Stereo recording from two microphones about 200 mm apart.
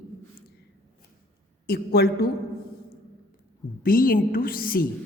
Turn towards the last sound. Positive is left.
turn(degrees=45)  # may be behind; listen again after turning